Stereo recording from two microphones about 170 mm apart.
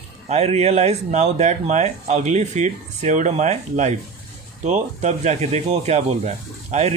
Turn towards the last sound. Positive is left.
turn(degrees=-40)  # may be behind; listen again after turning